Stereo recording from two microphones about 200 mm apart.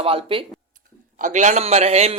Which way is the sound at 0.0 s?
30° right (ahead or behind).